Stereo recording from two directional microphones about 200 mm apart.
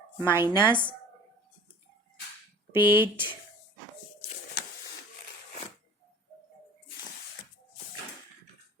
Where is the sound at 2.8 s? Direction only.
10° right (ahead or behind).